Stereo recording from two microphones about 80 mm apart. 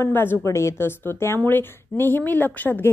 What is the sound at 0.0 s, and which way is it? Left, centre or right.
A woman's voice, left.